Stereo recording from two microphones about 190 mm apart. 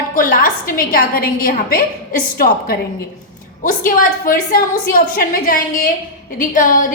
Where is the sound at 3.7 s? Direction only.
45° left (ahead or behind).